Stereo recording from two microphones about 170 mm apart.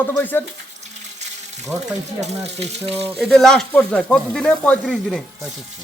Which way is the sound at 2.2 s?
40° right (ahead or behind).